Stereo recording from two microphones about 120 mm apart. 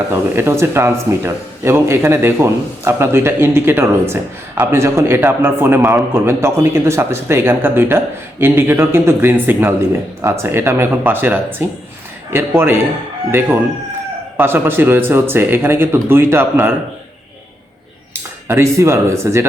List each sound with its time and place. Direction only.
0.1 s a man's voice: 20° right (ahead or behind)
14.3 s speech: 20° right (ahead or behind)
18.4 s a man's voice: 20° right (ahead or behind)